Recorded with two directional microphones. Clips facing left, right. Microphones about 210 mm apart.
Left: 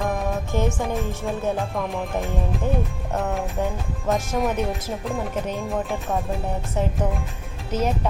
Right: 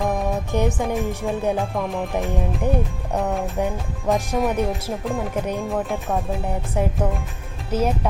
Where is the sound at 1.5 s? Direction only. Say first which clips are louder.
Right 2 dB; centre (ahead or behind).